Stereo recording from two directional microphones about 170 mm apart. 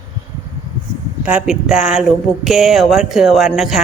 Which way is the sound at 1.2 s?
5° right (ahead or behind).